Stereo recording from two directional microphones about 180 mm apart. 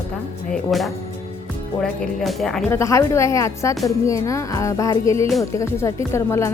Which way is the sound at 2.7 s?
15° left (ahead or behind).